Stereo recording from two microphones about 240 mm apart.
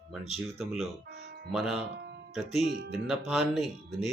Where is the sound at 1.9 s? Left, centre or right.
Right.